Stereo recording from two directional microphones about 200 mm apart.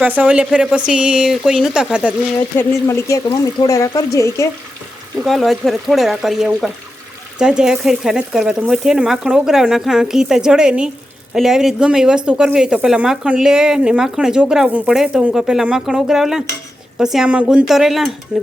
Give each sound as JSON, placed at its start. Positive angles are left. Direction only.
{"t": 0.0, "sound": "speech", "side_deg": -5}
{"t": 2.6, "sound": "speech", "side_deg": 15}
{"t": 5.2, "sound": "speech", "side_deg": 0}